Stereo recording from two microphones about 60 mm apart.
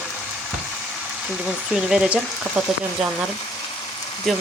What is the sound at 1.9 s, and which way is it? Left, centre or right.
Speech, centre.